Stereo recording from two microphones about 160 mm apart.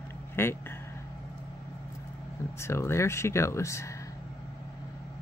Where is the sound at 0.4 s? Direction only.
15° left (ahead or behind).